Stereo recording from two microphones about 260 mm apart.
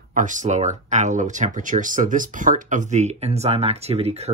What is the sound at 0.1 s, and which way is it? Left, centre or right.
Speech, right.